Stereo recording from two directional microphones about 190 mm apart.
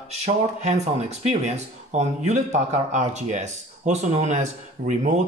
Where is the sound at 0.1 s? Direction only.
35° right (ahead or behind).